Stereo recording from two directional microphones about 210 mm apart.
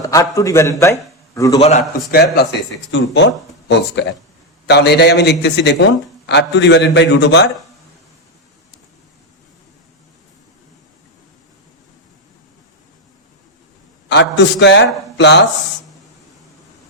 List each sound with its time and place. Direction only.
0.0 s a man's voice: 15° left (ahead or behind)
1.5 s a man's voice: 30° left (ahead or behind)
2.0 s a man's voice: 50° left (ahead or behind)
14.1 s a man's voice: 55° left (ahead or behind)